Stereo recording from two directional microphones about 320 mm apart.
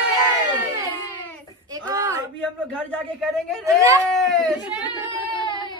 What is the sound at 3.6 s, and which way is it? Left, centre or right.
Speech, centre.